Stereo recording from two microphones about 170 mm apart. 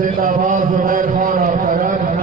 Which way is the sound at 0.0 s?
55° right (ahead or behind).